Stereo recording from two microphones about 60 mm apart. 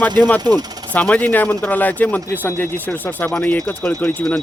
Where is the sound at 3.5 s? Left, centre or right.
Left.